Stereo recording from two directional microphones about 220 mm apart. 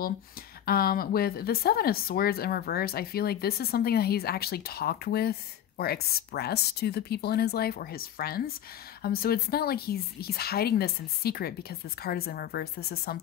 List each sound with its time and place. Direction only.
0.7 s speech: 40° left (ahead or behind)